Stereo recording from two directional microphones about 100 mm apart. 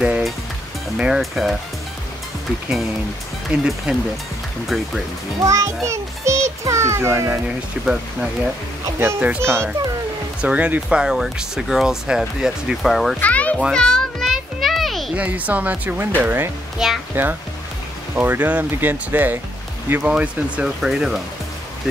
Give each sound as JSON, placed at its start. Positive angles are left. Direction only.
{"t": 0.0, "sound": "music", "side_deg": -5}
{"t": 0.9, "sound": "speech", "side_deg": -5}
{"t": 3.5, "sound": "speech", "side_deg": -10}
{"t": 5.4, "sound": "a child's voice", "side_deg": -30}
{"t": 5.9, "sound": "a sound", "side_deg": -30}
{"t": 7.4, "sound": "speech", "side_deg": -10}
{"t": 9.4, "sound": "speech", "side_deg": -25}
{"t": 10.4, "sound": "speech", "side_deg": -15}
{"t": 13.2, "sound": "a child's voice", "side_deg": 15}
{"t": 13.7, "sound": "children playing", "side_deg": 0}
{"t": 15.1, "sound": "speech", "side_deg": -15}